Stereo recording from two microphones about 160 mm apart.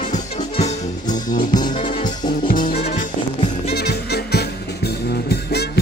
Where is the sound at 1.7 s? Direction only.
35° left (ahead or behind).